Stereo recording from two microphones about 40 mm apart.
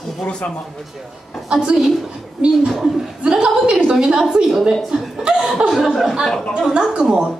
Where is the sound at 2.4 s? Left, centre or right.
Right.